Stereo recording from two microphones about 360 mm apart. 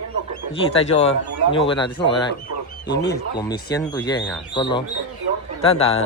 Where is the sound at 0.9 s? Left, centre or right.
Centre.